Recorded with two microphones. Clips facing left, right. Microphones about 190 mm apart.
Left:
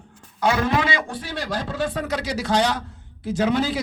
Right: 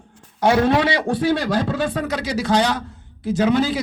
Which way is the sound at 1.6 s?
90° right.